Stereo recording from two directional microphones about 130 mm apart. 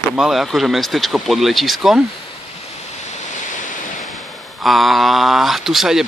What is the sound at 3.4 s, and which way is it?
Waves, 80° left.